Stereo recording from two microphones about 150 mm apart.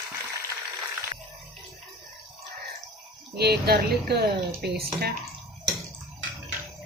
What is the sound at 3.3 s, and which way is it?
Speech, 90° right.